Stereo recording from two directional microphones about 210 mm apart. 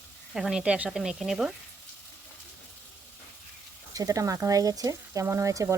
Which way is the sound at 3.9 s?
15° right (ahead or behind).